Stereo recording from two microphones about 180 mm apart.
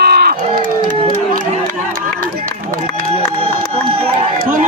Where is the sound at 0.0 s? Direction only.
60° right (ahead or behind).